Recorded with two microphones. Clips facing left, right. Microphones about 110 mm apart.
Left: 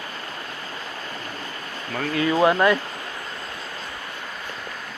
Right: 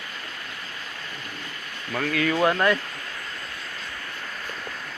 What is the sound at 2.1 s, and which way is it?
Speech, 20° left (ahead or behind).